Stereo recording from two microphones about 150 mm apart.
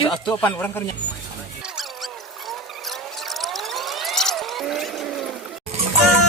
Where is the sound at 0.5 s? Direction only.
15° left (ahead or behind).